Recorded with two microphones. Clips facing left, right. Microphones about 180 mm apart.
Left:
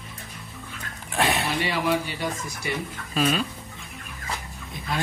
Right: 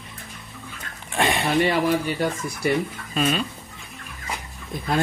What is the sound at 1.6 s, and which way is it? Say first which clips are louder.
Speech: right 5 dB; 50° right (ahead or behind).